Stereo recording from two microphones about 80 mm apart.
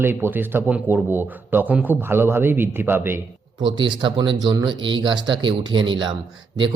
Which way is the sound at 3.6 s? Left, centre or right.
Right.